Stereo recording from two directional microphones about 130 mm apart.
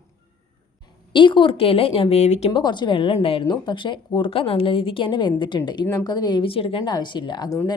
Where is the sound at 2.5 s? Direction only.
35° left (ahead or behind).